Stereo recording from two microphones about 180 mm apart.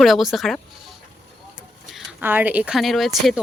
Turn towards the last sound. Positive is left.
turn(degrees=0)  # may be behind; listen again after turning